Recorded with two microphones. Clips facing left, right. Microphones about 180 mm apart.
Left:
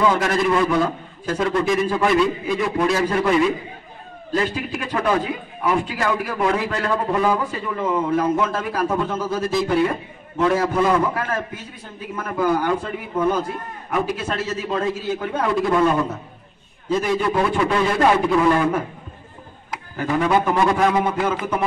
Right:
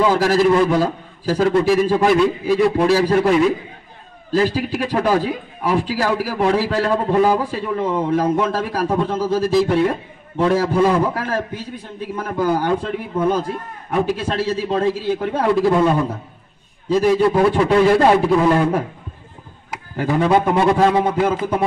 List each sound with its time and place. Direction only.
0.0 s a man's voice: 30° right (ahead or behind)
4.3 s a man's voice: 30° right (ahead or behind)
13.9 s a man's voice: 30° right (ahead or behind)
20.0 s a man's voice: 30° right (ahead or behind)